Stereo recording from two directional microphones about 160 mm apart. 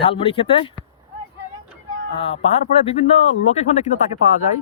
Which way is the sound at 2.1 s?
35° left (ahead or behind).